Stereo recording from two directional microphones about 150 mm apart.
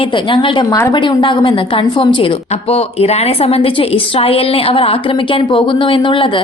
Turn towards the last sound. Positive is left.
turn(degrees=35)  # may be behind; listen again after turning